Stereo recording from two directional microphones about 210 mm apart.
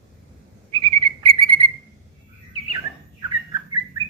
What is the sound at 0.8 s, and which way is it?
Frog, 25° right (ahead or behind).